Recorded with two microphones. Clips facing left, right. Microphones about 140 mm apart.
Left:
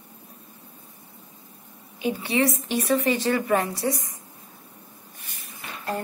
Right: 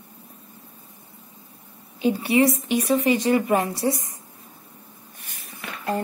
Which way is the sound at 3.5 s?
25° right (ahead or behind).